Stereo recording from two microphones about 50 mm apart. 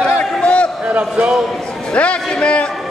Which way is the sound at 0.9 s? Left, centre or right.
Right.